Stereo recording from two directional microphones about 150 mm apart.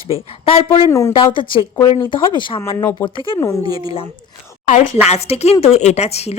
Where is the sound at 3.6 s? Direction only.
25° right (ahead or behind).